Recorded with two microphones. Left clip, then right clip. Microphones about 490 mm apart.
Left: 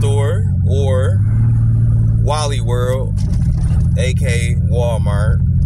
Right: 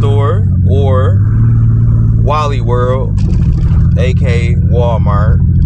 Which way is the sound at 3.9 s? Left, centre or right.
Left.